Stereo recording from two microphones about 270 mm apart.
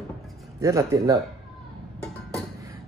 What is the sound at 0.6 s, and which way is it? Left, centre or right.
Speech, centre.